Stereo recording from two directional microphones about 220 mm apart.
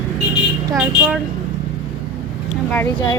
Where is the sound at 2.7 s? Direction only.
15° left (ahead or behind).